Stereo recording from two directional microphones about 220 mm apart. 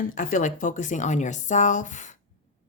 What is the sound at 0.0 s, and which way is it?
Speech, 40° left (ahead or behind).